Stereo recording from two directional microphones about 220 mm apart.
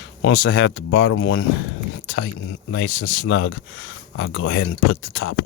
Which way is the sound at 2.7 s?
55° left (ahead or behind).